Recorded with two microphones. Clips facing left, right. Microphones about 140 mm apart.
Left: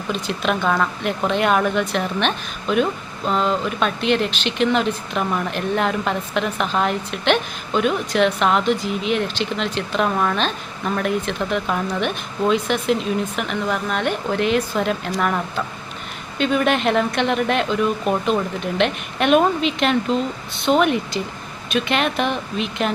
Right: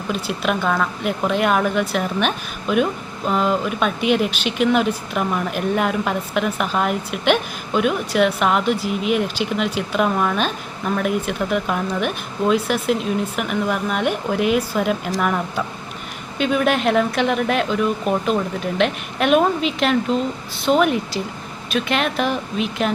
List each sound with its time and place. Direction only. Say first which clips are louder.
0.1 s speech: even; 5° right (ahead or behind)